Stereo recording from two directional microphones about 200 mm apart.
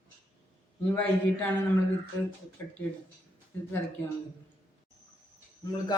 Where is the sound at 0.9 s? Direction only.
10° left (ahead or behind).